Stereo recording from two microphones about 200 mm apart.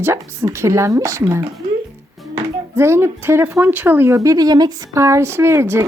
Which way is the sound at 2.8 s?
15° right (ahead or behind).